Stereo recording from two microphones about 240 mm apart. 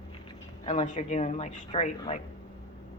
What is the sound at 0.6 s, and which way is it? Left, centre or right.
Speech, left.